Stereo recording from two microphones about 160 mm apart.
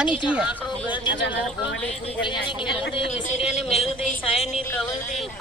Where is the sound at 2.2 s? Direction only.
30° left (ahead or behind).